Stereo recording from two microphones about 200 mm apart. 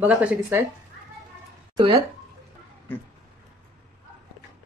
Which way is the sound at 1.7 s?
25° right (ahead or behind).